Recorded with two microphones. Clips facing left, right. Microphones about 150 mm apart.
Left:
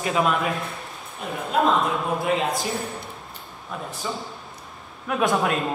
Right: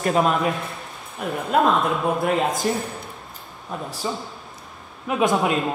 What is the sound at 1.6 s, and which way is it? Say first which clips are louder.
Speech: right 2 dB; centre (ahead or behind).